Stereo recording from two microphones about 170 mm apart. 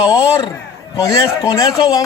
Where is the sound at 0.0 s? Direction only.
20° left (ahead or behind).